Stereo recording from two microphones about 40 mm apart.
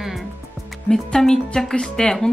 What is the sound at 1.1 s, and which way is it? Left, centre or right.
Speech, centre.